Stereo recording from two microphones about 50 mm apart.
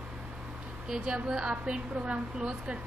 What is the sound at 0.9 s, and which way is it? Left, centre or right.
A woman's voice, centre.